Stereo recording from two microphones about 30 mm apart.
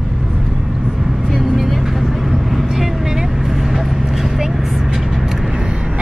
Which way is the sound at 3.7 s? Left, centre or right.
Centre.